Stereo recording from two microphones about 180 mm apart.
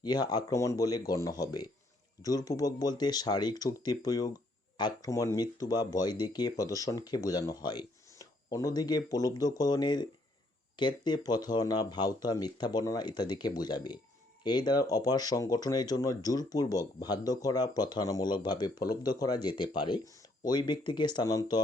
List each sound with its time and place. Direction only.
0.0 s speech: 20° left (ahead or behind)